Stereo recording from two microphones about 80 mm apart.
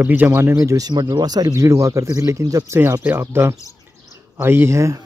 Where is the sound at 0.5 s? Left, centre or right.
Right.